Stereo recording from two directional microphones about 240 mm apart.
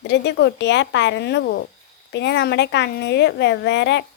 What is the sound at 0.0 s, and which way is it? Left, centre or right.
A woman's voice, left.